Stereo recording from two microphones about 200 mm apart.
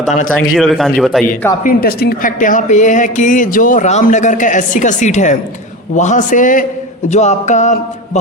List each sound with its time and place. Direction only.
0.0 s speech: 40° left (ahead or behind)
0.5 s a man's voice: centre (ahead or behind)
1.6 s speech: 50° left (ahead or behind)